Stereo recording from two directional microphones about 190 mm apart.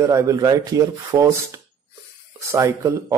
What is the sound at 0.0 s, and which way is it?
A man's voice, 15° right (ahead or behind).